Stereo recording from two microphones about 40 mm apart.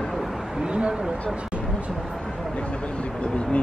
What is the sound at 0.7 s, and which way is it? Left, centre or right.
Speech, right.